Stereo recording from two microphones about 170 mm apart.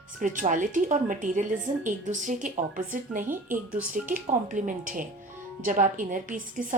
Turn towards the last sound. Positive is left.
turn(degrees=-50)  # may be behind; listen again after turning